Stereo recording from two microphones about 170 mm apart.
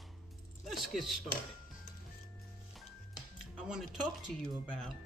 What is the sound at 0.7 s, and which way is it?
Speech, centre (ahead or behind).